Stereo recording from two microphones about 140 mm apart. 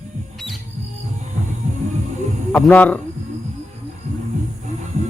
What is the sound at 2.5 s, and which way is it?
Speech, 10° left (ahead or behind).